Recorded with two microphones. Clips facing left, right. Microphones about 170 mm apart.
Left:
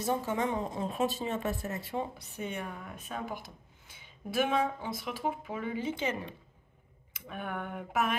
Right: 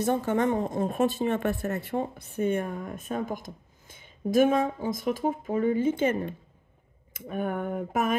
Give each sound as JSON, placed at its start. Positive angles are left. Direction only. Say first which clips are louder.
{"t": 0.0, "sound": "speech", "louder": "right 6 dB", "side_deg": -60}